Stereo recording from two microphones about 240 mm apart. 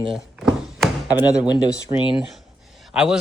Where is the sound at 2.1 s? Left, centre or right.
Centre.